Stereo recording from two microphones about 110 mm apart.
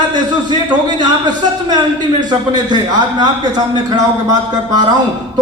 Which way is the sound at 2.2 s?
40° right (ahead or behind).